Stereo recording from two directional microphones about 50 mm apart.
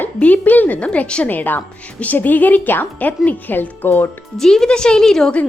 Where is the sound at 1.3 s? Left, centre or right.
Left.